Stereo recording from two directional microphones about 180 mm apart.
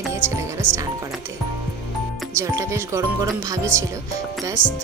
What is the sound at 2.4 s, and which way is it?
Speech, 15° right (ahead or behind).